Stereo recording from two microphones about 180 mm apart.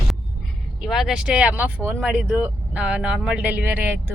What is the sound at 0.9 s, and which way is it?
Speech, centre (ahead or behind).